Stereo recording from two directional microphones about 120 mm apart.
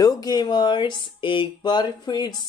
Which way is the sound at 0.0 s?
35° left (ahead or behind).